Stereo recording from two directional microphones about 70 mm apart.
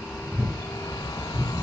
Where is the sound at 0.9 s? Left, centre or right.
Left.